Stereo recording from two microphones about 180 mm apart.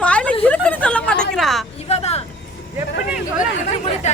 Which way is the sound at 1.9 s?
35° left (ahead or behind).